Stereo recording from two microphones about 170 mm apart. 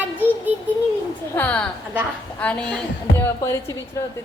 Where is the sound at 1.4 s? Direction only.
10° left (ahead or behind).